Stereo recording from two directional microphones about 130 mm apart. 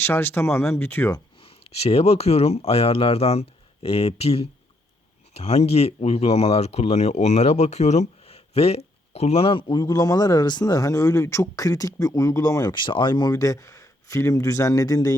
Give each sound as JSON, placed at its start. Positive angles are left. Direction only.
{"t": 0.0, "sound": "speech", "side_deg": 20}
{"t": 1.4, "sound": "speech", "side_deg": 50}